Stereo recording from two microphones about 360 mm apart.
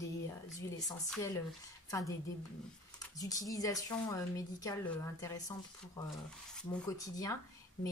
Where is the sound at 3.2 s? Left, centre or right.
Centre.